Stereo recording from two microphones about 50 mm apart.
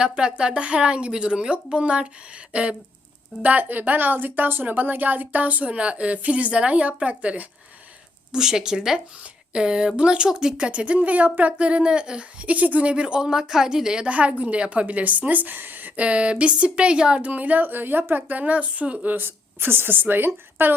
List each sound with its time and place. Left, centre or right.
0.0 s speech: centre
3.4 s a woman's voice: right
8.3 s speech: centre; by 12.9 s right
12.9 s speech: right
14.1 s a woman's voice: right
16.0 s speech: right
17.3 s a woman's voice: right
18.1 s a woman's voice: right
19.1 s a woman's voice: right